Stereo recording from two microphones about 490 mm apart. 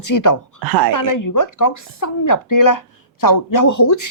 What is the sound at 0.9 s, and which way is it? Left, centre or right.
A woman's voice, left.